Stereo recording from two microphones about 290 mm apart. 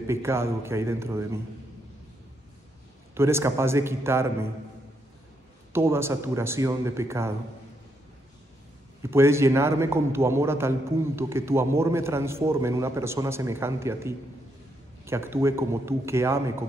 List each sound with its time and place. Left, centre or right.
0.0 s a man's voice: centre
3.2 s a man's voice: centre
5.7 s a man's voice: centre
9.0 s a man's voice: centre